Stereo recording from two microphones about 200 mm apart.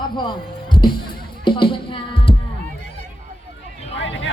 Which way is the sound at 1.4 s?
25° left (ahead or behind).